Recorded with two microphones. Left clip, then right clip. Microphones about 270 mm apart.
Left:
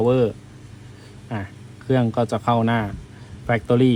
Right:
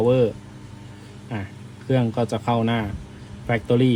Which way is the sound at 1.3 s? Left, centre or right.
Left.